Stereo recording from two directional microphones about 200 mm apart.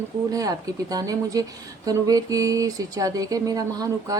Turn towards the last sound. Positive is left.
turn(degrees=-15)  # may be behind; listen again after turning